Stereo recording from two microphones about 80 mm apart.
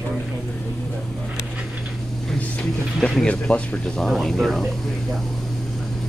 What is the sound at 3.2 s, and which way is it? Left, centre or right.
Speech, centre.